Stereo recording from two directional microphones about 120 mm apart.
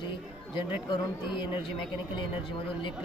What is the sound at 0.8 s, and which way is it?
Speech, 40° left (ahead or behind).